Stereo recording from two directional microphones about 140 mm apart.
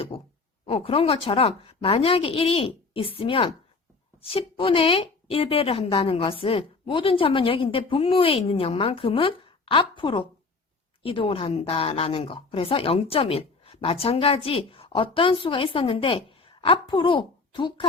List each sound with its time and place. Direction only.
0.1 s speech: 40° left (ahead or behind)